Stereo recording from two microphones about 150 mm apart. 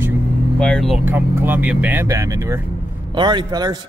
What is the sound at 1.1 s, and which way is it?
Speech, 10° right (ahead or behind).